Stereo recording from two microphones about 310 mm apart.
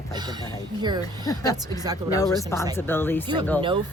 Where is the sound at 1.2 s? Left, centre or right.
Centre.